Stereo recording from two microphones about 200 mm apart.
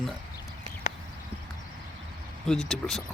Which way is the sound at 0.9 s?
35° left (ahead or behind).